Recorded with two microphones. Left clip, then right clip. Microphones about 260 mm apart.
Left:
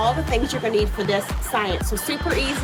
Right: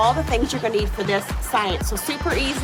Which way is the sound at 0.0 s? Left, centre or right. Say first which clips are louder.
Right 2 dB; centre.